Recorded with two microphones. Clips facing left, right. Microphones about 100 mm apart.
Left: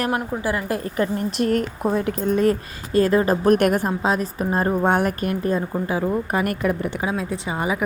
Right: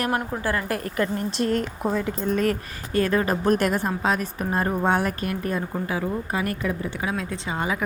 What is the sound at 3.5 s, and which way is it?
Speech, 60° left (ahead or behind).